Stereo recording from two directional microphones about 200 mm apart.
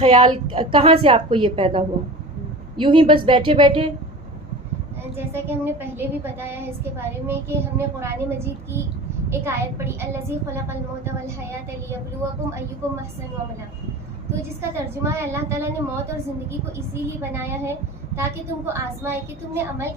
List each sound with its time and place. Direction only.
0.0 s a woman's voice: 25° right (ahead or behind)
5.1 s a woman's voice: 10° right (ahead or behind)
14.6 s a woman's voice: 10° right (ahead or behind)
16.9 s a woman's voice: 10° right (ahead or behind)